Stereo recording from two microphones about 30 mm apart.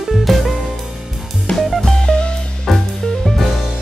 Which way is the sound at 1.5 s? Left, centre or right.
Left.